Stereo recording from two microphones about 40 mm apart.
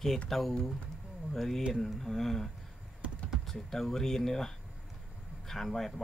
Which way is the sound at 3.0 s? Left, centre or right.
Right.